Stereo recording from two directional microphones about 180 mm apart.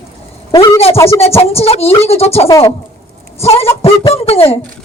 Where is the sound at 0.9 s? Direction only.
15° left (ahead or behind).